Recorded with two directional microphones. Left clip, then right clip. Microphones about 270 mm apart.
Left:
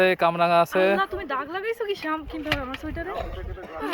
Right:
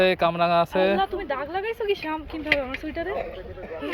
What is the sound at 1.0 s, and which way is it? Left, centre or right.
Speech, centre.